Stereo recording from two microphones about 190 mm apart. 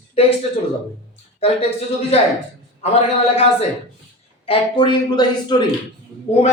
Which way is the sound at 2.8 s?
35° left (ahead or behind).